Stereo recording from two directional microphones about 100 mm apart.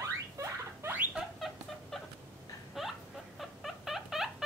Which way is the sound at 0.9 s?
15° right (ahead or behind).